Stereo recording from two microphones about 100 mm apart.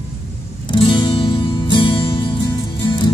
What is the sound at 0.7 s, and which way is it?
Music, 55° left (ahead or behind).